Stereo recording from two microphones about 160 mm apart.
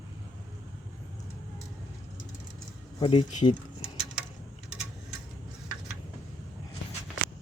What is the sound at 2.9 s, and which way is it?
Speech, 30° left (ahead or behind).